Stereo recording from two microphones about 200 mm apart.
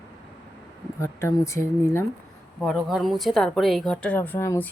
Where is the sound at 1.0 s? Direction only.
15° left (ahead or behind).